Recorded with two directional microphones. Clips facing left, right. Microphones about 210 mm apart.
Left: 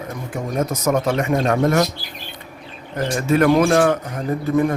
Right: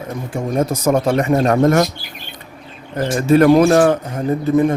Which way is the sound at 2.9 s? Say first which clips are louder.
Right 5 dB; 30° right (ahead or behind).